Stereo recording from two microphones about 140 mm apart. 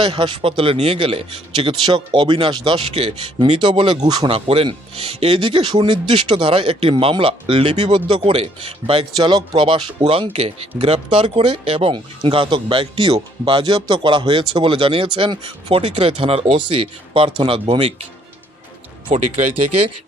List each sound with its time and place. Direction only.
0.0 s speech: 40° right (ahead or behind)
4.3 s speech: 40° right (ahead or behind)